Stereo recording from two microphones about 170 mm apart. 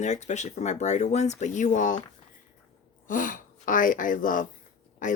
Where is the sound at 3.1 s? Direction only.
50° left (ahead or behind).